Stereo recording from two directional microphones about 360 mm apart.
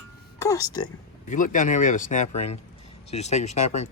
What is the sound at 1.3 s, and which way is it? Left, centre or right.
Speech, left.